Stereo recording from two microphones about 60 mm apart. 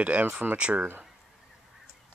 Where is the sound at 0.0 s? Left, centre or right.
Right.